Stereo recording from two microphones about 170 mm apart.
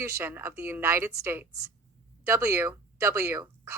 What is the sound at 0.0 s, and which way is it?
Speech, 15° right (ahead or behind).